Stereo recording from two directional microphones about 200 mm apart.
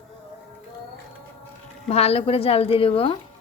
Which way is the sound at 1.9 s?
30° left (ahead or behind).